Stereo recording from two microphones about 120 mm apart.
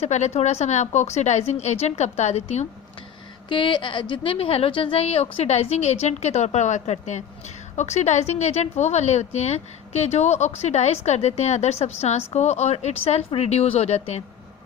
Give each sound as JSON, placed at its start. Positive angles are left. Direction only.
{"t": 0.0, "sound": "a woman's voice", "side_deg": 70}
{"t": 3.5, "sound": "a woman's voice", "side_deg": 40}